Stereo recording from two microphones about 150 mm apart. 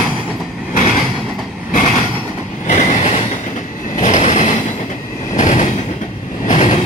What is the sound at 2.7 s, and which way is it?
Train, 55° left (ahead or behind).